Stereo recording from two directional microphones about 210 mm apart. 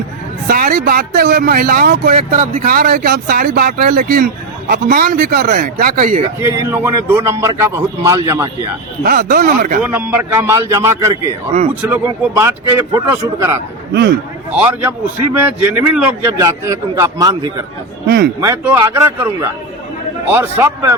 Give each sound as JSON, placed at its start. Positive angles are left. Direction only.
{"t": 0.4, "sound": "speech", "side_deg": -45}
{"t": 6.4, "sound": "a man's voice", "side_deg": -15}
{"t": 9.0, "sound": "speech", "side_deg": -45}
{"t": 9.8, "sound": "a man's voice", "side_deg": -5}